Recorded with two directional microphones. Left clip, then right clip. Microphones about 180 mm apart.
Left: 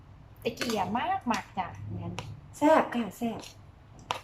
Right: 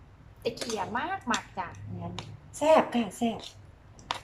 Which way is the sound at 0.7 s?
15° left (ahead or behind).